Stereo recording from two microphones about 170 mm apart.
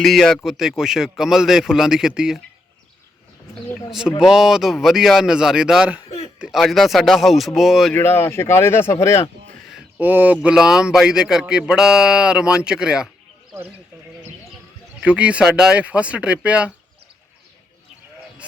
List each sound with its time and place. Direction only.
0.0 s speech: centre (ahead or behind)
4.2 s speech: 5° right (ahead or behind)
6.1 s a sound: 35° left (ahead or behind)
6.4 s speech: centre (ahead or behind)
7.9 s speech: 15° left (ahead or behind)
9.6 s a sound: 5° right (ahead or behind)
10.4 s speech: 5° right (ahead or behind)
15.0 s speech: 5° right (ahead or behind)